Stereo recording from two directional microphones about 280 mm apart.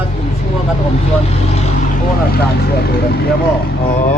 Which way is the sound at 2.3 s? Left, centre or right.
Left.